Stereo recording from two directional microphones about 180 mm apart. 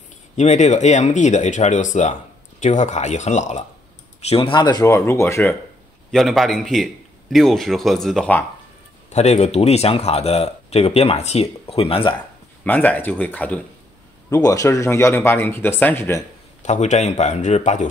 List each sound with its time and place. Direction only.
0.4 s speech: 40° left (ahead or behind)
4.3 s speech: 30° left (ahead or behind); by 5.6 s 15° left (ahead or behind)
6.1 s a man's voice: centre (ahead or behind)
9.1 s speech: 35° left (ahead or behind)
12.6 s speech: 10° left (ahead or behind)
16.6 s speech: 40° left (ahead or behind)